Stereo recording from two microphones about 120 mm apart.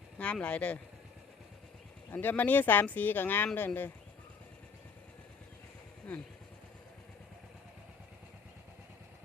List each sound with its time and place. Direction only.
0.2 s speech: 10° left (ahead or behind)
2.1 s speech: 15° left (ahead or behind)